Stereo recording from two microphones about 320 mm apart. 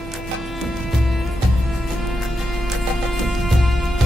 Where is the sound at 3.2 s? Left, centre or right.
Centre.